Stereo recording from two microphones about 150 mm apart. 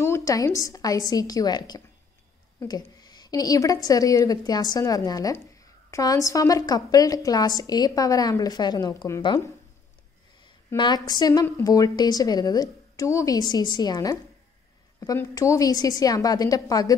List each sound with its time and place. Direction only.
0.0 s a woman's voice: 20° left (ahead or behind)
10.8 s a woman's voice: 30° left (ahead or behind)